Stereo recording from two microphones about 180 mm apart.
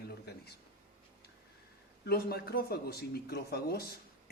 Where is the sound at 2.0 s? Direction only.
60° left (ahead or behind).